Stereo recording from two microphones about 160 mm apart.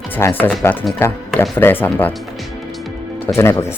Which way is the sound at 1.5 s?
10° left (ahead or behind).